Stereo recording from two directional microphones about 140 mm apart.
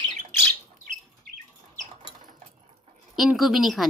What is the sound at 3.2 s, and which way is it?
Speech, centre (ahead or behind).